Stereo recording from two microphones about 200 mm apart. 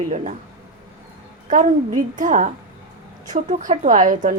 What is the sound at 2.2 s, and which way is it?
A woman's voice, 40° right (ahead or behind).